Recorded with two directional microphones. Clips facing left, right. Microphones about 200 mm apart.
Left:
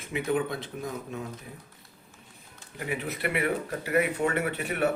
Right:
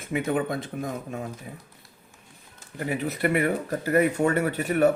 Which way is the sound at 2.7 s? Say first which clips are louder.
Right 4 dB; 40° right (ahead or behind).